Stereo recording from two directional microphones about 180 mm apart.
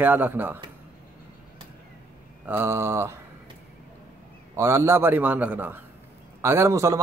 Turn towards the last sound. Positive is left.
turn(degrees=-15)  # may be behind; listen again after turning